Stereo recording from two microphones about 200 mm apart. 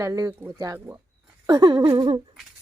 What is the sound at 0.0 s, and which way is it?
Speech, 15° right (ahead or behind).